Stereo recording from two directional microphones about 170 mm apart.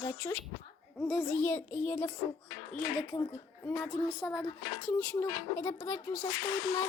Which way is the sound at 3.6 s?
10° left (ahead or behind).